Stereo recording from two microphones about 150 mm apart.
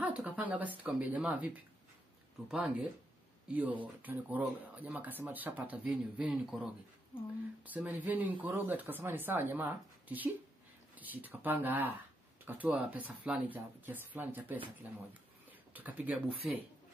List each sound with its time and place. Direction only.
0.0 s speech: 10° right (ahead or behind)